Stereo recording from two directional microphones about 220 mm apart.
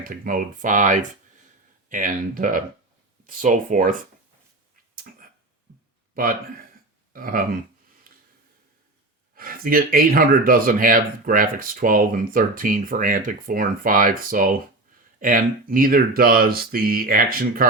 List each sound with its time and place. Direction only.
0.0 s speech: 40° right (ahead or behind)
6.1 s speech: 40° right (ahead or behind)
8.1 s a sound: 40° right (ahead or behind)
9.3 s speech: 40° right (ahead or behind)